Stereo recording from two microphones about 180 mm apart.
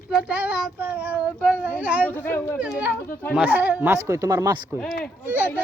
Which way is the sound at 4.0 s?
20° right (ahead or behind).